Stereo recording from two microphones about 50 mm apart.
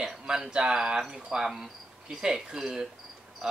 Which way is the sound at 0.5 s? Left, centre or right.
Centre.